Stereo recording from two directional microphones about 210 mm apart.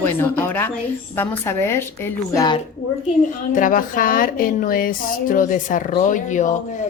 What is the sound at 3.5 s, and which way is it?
Speech, 40° left (ahead or behind).